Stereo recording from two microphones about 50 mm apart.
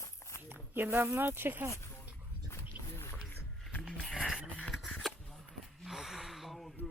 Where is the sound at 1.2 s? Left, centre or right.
Right.